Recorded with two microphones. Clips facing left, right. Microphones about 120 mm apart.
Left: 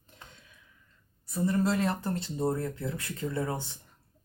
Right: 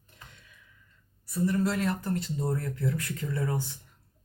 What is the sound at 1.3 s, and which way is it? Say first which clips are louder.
A woman's voice: even; 25° left (ahead or behind).